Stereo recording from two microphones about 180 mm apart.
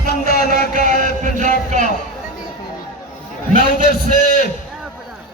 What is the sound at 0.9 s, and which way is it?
Speech, 45° right (ahead or behind).